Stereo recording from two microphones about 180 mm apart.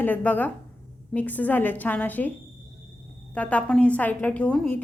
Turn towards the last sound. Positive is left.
turn(degrees=5)  # may be behind; listen again after turning